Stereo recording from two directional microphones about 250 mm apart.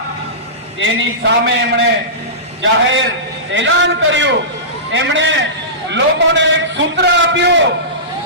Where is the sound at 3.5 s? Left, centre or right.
Right.